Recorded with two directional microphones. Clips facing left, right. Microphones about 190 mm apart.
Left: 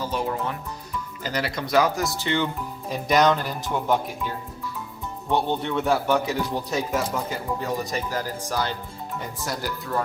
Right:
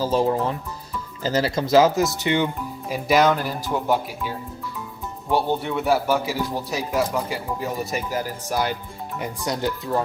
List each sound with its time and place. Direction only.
0.0 s speech: 30° right (ahead or behind)
2.9 s speech: 5° right (ahead or behind)
5.3 s speech: 10° right (ahead or behind)
7.6 s speech: 10° right (ahead or behind)